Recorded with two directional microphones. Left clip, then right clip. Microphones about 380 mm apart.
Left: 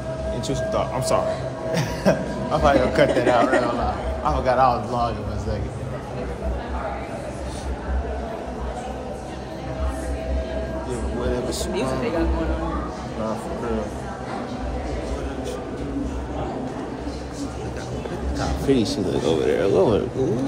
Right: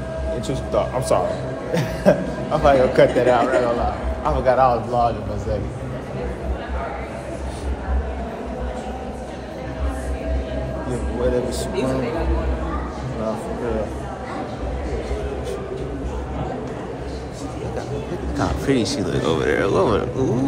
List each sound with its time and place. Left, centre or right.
0.7 s speech: centre
18.7 s speech: centre
19.2 s vehicle: centre